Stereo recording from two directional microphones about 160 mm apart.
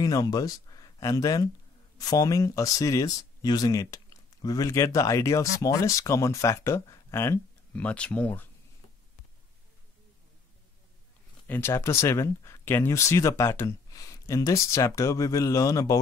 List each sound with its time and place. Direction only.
0.0 s speech: 25° left (ahead or behind)
11.4 s speech: 15° left (ahead or behind)